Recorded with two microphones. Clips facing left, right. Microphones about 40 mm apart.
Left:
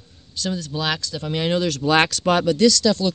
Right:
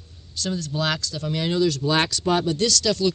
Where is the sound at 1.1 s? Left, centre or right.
Left.